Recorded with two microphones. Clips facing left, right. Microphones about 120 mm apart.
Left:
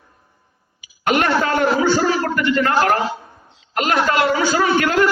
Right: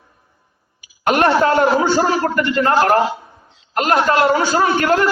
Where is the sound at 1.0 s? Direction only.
40° right (ahead or behind).